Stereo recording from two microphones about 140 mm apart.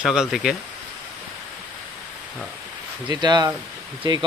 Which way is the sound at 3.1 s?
30° right (ahead or behind).